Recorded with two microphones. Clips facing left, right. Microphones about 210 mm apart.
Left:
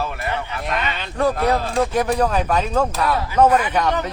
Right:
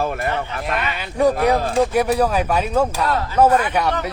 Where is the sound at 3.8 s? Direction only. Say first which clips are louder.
Even; 10° right (ahead or behind).